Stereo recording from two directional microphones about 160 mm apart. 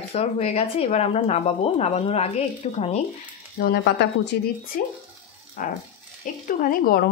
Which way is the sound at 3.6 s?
80° left.